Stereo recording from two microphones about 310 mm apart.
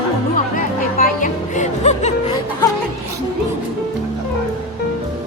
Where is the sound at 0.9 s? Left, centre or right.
Left.